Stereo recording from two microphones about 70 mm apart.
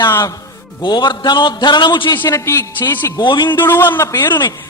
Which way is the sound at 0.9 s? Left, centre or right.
Left.